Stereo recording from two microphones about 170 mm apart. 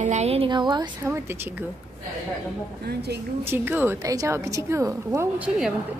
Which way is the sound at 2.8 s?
70° right (ahead or behind).